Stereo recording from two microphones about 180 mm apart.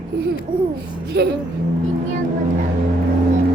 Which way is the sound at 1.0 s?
70° right (ahead or behind).